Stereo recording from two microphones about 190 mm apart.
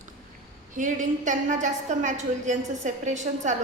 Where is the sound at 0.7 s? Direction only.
40° right (ahead or behind).